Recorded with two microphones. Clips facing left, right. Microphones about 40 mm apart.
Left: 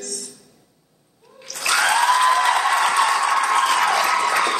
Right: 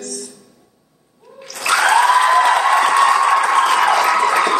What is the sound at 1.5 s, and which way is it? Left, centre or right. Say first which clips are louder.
Applause: right 5 dB; centre.